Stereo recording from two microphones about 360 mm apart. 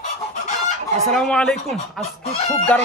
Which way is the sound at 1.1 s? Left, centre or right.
Centre.